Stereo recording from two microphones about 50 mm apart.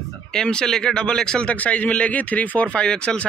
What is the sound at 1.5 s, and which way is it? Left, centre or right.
Speech, left.